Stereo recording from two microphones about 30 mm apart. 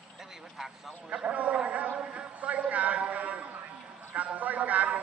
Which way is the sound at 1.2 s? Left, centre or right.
Right.